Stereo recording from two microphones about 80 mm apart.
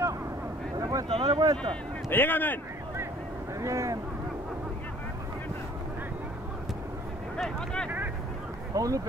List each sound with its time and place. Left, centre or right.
0.7 s a sound: right
1.3 s speech: right
2.0 s speech: left
3.6 s speech: right
7.3 s speech: centre
8.7 s speech: right